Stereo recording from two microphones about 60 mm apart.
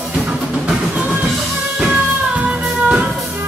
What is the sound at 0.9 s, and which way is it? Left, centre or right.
Music, right.